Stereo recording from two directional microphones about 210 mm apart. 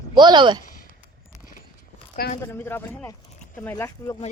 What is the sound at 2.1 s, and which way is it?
Speech, 45° left (ahead or behind).